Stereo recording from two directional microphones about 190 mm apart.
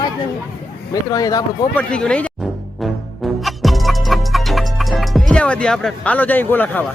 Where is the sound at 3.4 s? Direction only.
Centre (ahead or behind).